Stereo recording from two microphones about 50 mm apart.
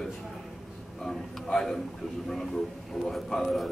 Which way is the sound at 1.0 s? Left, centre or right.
Centre.